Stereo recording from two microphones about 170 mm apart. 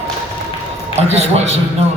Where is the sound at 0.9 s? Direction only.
40° right (ahead or behind).